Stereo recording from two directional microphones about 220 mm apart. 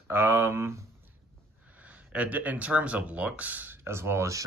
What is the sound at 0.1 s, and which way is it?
Speech, 10° right (ahead or behind).